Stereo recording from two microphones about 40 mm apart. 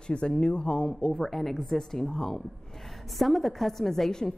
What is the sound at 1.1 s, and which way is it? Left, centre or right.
A woman's voice, centre.